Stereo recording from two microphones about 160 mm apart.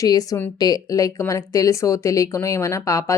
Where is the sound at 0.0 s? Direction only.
25° left (ahead or behind).